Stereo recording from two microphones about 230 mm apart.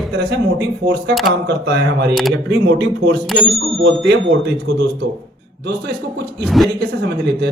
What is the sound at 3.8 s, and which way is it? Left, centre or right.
Speech, right.